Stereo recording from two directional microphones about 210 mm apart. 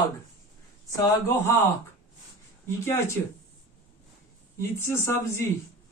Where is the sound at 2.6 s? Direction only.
15° left (ahead or behind).